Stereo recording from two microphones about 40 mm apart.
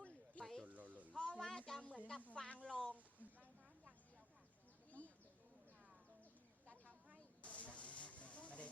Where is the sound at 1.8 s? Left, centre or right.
Left.